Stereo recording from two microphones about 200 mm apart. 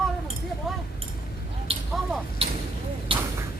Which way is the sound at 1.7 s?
30° right (ahead or behind).